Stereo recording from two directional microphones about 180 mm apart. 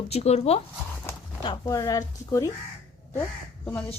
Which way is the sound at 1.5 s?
20° left (ahead or behind).